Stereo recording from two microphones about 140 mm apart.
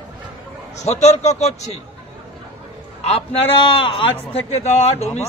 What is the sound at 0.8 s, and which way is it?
Speech, 50° left (ahead or behind).